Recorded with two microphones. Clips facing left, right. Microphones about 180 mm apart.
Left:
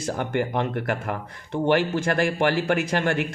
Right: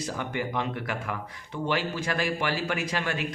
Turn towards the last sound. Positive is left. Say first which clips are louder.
# left 7 dB
turn(degrees=55)  # may be behind; listen again after turning